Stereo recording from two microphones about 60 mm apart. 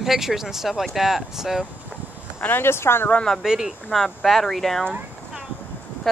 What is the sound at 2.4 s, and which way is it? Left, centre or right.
Speech, left.